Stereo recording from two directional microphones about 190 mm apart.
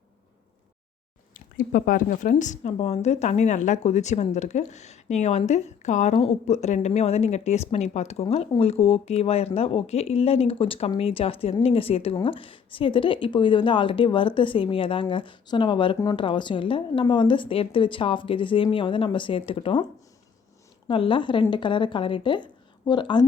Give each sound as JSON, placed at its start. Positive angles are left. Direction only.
{"t": 1.3, "sound": "a woman's voice", "side_deg": 45}
{"t": 20.8, "sound": "a woman's voice", "side_deg": 25}